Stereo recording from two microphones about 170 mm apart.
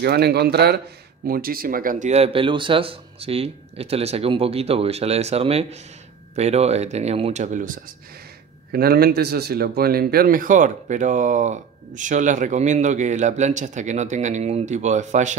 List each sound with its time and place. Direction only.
0.0 s speech: 70° right (ahead or behind)
1.2 s speech: 60° right (ahead or behind)
8.7 s speech: 65° right (ahead or behind); by 15.3 s 45° right (ahead or behind)